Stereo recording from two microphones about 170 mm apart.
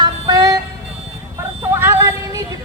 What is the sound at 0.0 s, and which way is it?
Vehicle, 20° right (ahead or behind).